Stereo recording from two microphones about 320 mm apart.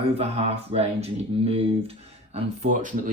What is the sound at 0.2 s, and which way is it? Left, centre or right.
Speech, centre.